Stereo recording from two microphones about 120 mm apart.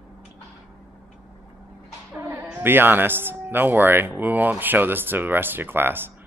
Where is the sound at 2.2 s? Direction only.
20° right (ahead or behind).